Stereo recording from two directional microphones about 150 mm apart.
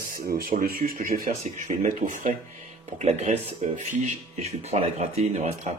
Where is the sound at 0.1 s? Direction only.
75° right (ahead or behind).